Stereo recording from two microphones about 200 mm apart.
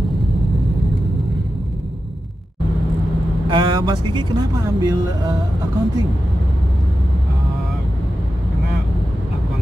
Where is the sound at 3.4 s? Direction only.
25° right (ahead or behind).